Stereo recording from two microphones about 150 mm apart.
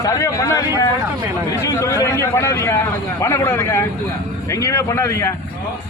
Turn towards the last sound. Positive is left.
turn(degrees=20)  # may be behind; listen again after turning